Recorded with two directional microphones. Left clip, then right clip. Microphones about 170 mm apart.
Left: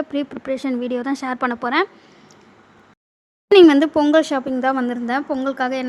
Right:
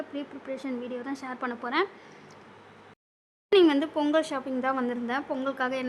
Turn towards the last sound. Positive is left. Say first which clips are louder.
# left 8 dB
turn(degrees=25)  # may be behind; listen again after turning